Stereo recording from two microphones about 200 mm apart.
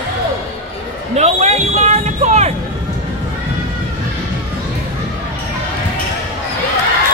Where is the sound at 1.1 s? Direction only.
35° right (ahead or behind).